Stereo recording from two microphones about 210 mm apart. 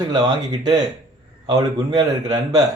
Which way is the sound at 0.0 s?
20° right (ahead or behind).